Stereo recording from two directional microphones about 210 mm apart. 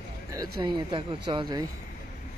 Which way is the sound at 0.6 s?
20° right (ahead or behind).